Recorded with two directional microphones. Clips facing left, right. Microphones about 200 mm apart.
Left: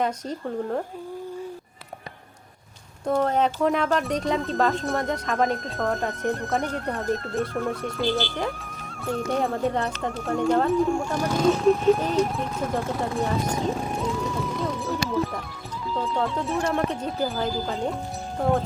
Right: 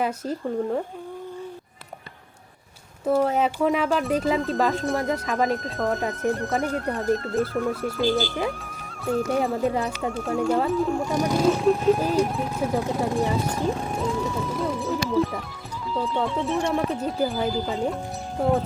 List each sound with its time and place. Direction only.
0.0 s speech: 5° right (ahead or behind)
3.1 s speech: 5° right (ahead or behind)
11.1 s speech: 15° right (ahead or behind)
11.4 s speech: centre (ahead or behind)
13.7 s music: centre (ahead or behind)
16.0 s speech: centre (ahead or behind)